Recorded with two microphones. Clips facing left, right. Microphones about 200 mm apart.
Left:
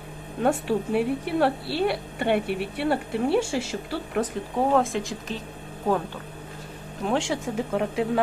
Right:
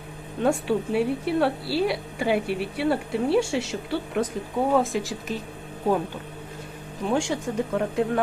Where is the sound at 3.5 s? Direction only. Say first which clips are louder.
Right 1 dB; 70° right (ahead or behind).